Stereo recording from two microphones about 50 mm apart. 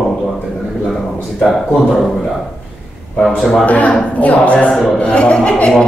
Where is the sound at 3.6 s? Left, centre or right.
Left.